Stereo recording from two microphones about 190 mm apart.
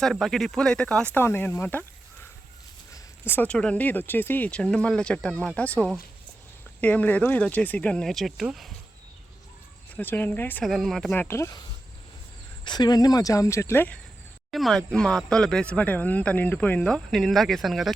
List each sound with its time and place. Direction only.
0.0 s speech: centre (ahead or behind)
2.9 s speech: 10° left (ahead or behind)
9.9 s speech: 10° left (ahead or behind)
12.6 s speech: 20° left (ahead or behind); by 17.9 s centre (ahead or behind)